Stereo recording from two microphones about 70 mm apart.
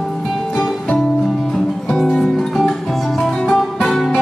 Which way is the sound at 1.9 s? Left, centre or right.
Centre.